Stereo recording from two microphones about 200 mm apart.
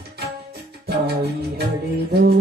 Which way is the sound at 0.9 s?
55° right (ahead or behind).